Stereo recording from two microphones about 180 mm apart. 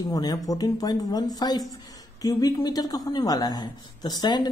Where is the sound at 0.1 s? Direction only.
20° left (ahead or behind).